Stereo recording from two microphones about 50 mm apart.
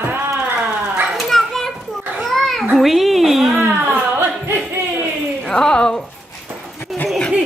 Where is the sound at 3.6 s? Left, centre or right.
Right.